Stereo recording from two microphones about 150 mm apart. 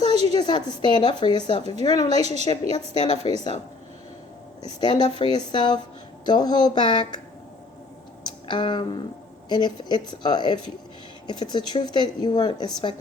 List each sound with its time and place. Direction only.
0.0 s a sound: 45° right (ahead or behind)
0.3 s a woman's voice: 30° left (ahead or behind)
2.2 s a woman's voice: 45° right (ahead or behind)
2.7 s a woman's voice: 50° left (ahead or behind)
3.2 s speech: 40° right (ahead or behind)
4.6 s a woman's voice: 30° left (ahead or behind)
8.4 s a sound: 30° left (ahead or behind)
9.5 s a woman's voice: 30° left (ahead or behind)